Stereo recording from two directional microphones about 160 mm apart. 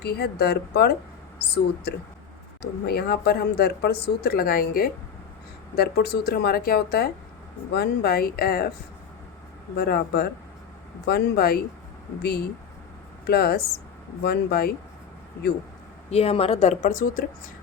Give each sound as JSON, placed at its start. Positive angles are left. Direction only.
{"t": 0.0, "sound": "speech", "side_deg": 90}
{"t": 5.7, "sound": "speech", "side_deg": 85}
{"t": 9.7, "sound": "speech", "side_deg": 75}
{"t": 12.2, "sound": "speech", "side_deg": 85}
{"t": 13.2, "sound": "speech", "side_deg": 75}
{"t": 16.0, "sound": "a woman's voice", "side_deg": 40}